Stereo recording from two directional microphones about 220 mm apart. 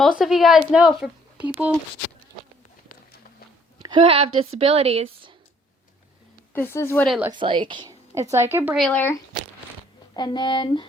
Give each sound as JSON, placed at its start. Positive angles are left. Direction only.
{"t": 0.2, "sound": "speech", "side_deg": 0}
{"t": 3.8, "sound": "a woman's voice", "side_deg": -25}
{"t": 6.5, "sound": "a woman's voice", "side_deg": 10}
{"t": 7.3, "sound": "a woman's voice", "side_deg": -20}
{"t": 10.2, "sound": "speech", "side_deg": 20}